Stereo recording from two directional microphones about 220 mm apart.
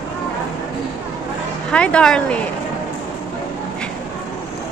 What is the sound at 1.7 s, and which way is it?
Speech, 5° left (ahead or behind).